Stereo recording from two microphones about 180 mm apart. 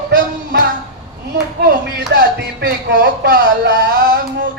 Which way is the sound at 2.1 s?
65° right (ahead or behind).